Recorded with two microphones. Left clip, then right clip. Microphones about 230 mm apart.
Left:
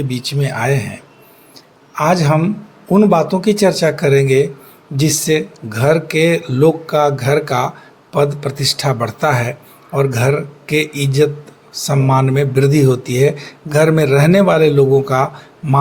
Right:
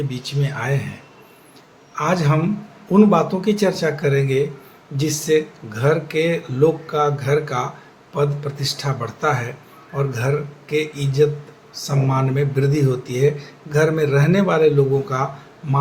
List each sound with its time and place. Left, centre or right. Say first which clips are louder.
0.1 s speech: left 6 dB; left
2.0 s speech: left 6 dB; left